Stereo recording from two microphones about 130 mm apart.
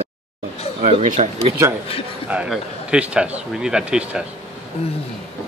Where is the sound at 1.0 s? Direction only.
60° right (ahead or behind).